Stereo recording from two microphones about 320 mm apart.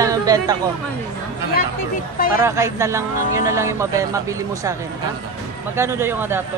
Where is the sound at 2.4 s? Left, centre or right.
Centre.